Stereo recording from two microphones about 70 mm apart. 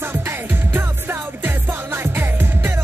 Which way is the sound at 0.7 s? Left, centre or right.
Right.